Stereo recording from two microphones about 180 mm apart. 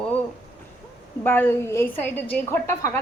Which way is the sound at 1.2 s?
10° left (ahead or behind).